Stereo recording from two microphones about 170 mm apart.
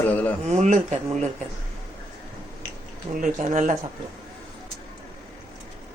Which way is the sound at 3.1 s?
50° right (ahead or behind).